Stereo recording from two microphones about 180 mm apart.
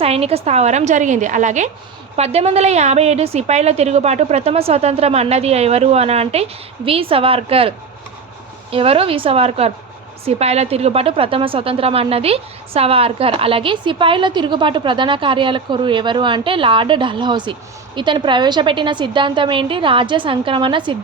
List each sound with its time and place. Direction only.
0.0 s a woman's voice: 35° right (ahead or behind)
8.7 s a woman's voice: 30° right (ahead or behind)